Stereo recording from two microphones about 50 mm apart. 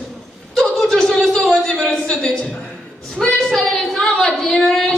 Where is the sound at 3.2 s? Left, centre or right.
Centre.